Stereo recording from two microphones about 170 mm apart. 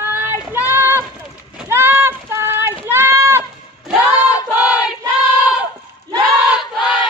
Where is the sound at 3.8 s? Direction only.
5° right (ahead or behind).